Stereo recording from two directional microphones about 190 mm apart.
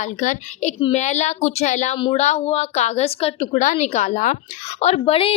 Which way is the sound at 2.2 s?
35° left (ahead or behind).